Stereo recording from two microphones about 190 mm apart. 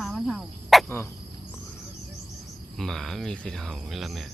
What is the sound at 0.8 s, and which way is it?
Cricket, 10° left (ahead or behind).